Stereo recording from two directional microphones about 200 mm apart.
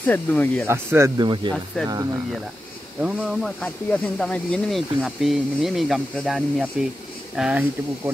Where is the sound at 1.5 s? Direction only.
5° left (ahead or behind).